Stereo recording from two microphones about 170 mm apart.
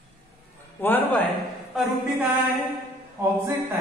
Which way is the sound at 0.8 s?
10° left (ahead or behind).